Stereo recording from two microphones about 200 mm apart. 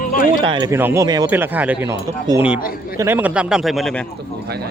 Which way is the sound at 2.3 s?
20° right (ahead or behind).